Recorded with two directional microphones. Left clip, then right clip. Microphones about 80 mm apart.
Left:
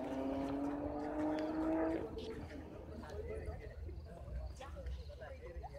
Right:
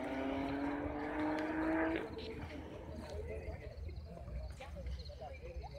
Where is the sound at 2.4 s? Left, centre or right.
Centre.